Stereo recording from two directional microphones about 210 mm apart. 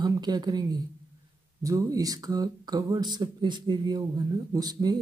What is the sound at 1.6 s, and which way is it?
Speech, 15° right (ahead or behind).